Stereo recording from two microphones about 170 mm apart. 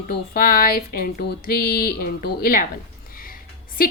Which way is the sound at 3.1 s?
55° left (ahead or behind).